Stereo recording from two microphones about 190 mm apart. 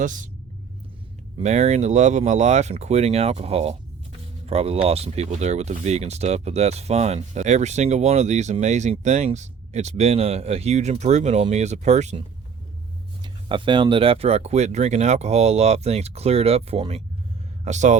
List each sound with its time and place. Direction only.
0.0 s speech: 40° right (ahead or behind)
1.4 s speech: 35° right (ahead or behind)
13.2 s speech: 25° right (ahead or behind)